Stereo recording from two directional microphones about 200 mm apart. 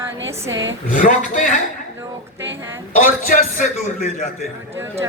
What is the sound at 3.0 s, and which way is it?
A man's voice, 40° left (ahead or behind).